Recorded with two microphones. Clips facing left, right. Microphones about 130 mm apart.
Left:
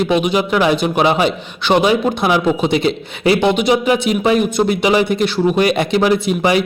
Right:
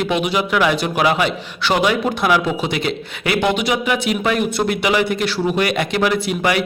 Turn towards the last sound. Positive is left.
turn(degrees=25)  # may be behind; listen again after turning